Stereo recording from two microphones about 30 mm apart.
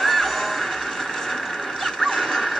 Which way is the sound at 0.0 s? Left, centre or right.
Centre.